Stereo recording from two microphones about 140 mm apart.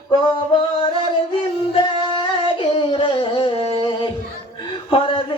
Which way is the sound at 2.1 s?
35° left (ahead or behind).